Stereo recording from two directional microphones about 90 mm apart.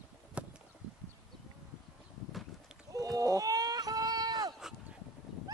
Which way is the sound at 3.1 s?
45° right (ahead or behind).